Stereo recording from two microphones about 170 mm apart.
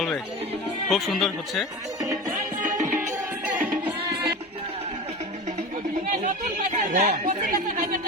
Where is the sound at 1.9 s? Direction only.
20° right (ahead or behind).